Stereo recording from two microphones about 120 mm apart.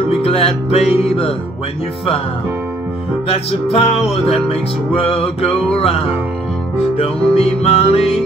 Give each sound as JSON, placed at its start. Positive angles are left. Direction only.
{"t": 0.1, "sound": "music", "side_deg": 55}
{"t": 3.3, "sound": "music", "side_deg": 55}